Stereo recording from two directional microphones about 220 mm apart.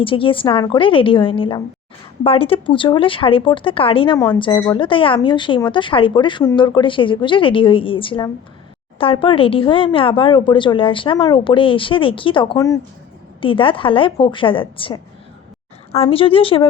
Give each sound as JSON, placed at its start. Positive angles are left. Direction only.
{"t": 0.0, "sound": "speech", "side_deg": 25}